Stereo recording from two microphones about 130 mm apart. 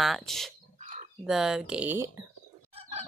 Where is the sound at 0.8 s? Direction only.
65° right (ahead or behind).